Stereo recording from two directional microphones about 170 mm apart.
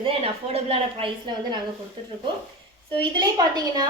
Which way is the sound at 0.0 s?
35° right (ahead or behind).